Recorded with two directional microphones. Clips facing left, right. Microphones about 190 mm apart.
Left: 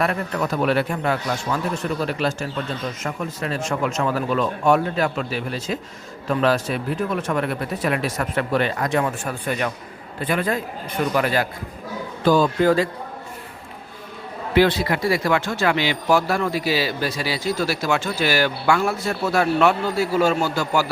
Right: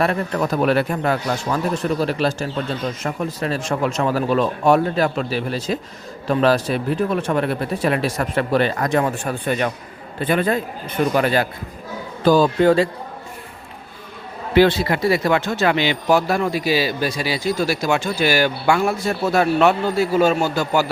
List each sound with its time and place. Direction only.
0.0 s speech: 35° right (ahead or behind)
14.5 s speech: 30° right (ahead or behind)